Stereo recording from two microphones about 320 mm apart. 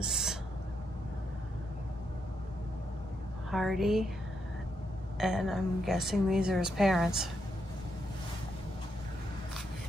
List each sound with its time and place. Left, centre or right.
0.0 s owl: centre
3.4 s a woman's voice: centre
5.1 s a woman's voice: centre